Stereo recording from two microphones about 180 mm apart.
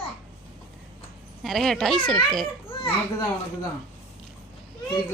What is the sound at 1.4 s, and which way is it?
Speech, centre (ahead or behind).